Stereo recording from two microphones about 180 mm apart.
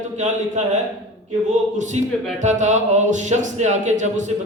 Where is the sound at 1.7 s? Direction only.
40° right (ahead or behind).